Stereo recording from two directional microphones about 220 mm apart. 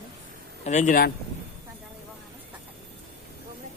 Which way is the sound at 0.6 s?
30° left (ahead or behind).